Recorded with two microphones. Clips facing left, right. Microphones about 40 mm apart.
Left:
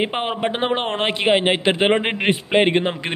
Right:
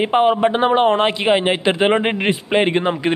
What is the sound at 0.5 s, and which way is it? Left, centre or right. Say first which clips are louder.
A man's voice: right 7 dB; left.